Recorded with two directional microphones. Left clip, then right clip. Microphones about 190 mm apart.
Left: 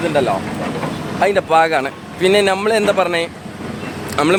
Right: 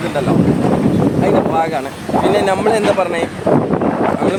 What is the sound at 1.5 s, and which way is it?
Speech, 45° left (ahead or behind).